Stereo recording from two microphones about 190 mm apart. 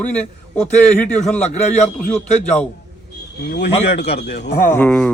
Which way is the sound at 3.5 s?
65° left (ahead or behind).